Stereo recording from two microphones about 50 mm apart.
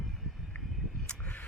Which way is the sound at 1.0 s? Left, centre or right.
Left.